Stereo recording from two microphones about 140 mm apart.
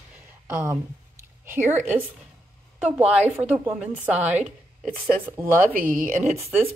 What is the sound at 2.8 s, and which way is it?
Speech, 10° right (ahead or behind).